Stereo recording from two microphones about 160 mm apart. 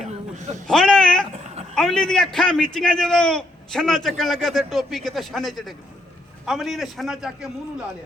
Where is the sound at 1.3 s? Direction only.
40° right (ahead or behind).